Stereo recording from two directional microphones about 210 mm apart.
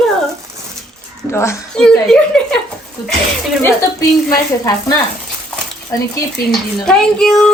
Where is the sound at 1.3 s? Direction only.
10° left (ahead or behind).